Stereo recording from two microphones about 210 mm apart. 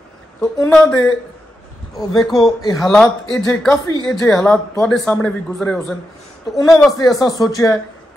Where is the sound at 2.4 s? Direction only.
20° left (ahead or behind).